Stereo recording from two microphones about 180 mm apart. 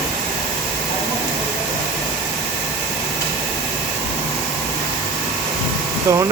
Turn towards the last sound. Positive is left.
turn(degrees=-15)  # may be behind; listen again after turning